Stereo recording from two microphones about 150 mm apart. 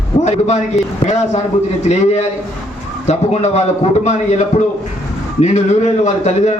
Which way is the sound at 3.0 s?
50° left (ahead or behind).